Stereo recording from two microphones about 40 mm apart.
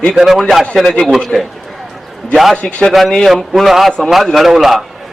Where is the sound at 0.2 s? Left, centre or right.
Centre.